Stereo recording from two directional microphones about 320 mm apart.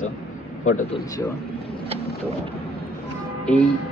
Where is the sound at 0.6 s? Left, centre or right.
Left.